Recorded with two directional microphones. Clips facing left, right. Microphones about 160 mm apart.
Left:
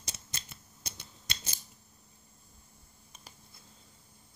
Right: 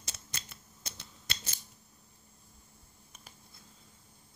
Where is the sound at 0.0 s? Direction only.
15° left (ahead or behind).